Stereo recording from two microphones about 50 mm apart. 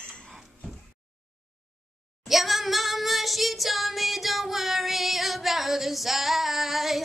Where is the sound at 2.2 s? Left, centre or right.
Centre.